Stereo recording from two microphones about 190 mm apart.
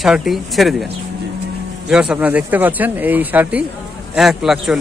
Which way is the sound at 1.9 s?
5° right (ahead or behind).